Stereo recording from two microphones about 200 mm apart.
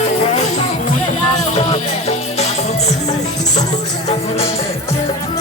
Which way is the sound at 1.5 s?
30° left (ahead or behind).